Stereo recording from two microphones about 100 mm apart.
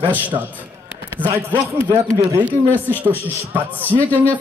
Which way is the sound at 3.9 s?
50° right (ahead or behind).